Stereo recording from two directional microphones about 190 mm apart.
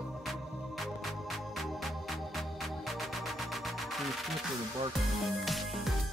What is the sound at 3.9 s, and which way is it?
Music, centre (ahead or behind).